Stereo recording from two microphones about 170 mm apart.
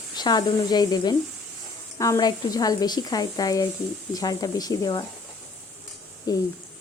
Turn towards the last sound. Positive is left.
turn(degrees=20)  # may be behind; listen again after turning